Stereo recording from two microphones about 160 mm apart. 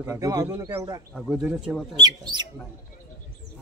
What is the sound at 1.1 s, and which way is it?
Speech, centre (ahead or behind).